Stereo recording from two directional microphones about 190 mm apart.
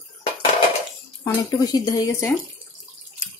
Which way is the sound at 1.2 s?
20° left (ahead or behind).